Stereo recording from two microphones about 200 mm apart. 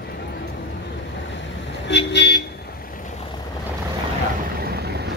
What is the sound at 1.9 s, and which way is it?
Vehicle, 60° left (ahead or behind).